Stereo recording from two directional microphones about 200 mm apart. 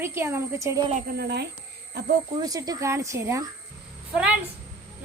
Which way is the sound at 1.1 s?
55° right (ahead or behind).